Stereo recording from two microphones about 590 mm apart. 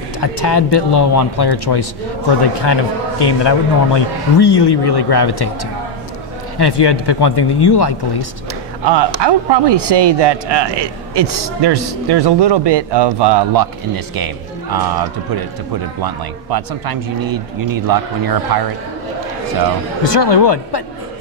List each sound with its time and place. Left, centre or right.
0.2 s a man's voice: left
8.8 s a man's voice: right
20.0 s speech: left